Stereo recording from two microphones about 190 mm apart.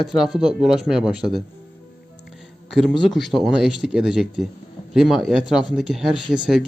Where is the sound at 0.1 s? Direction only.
Centre (ahead or behind).